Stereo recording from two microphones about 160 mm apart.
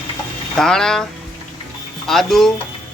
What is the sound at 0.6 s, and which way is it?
Speech, 5° left (ahead or behind).